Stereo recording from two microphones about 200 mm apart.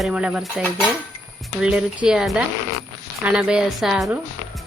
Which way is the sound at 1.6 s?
5° right (ahead or behind).